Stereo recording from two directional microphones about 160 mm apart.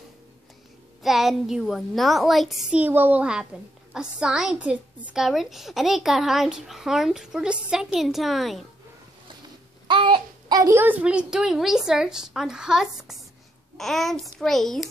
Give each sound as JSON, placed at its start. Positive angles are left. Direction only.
{"t": 1.0, "sound": "a woman's voice", "side_deg": 0}
{"t": 9.8, "sound": "a sound", "side_deg": -30}
{"t": 10.8, "sound": "a woman's voice", "side_deg": -10}